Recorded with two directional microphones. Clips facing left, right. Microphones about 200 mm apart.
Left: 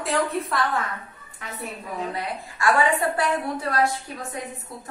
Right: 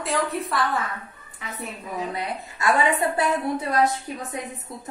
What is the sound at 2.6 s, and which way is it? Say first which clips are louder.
A woman's voice: even; 20° right (ahead or behind).